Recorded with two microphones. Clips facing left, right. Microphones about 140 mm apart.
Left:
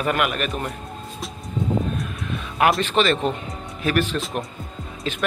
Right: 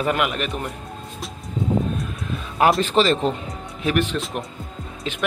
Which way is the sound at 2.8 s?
35° right (ahead or behind).